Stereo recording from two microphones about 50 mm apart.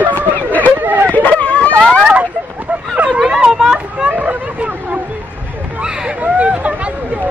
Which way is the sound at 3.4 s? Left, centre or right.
Centre.